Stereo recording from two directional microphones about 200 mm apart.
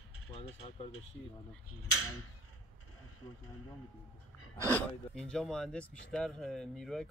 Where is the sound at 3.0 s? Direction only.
90° left.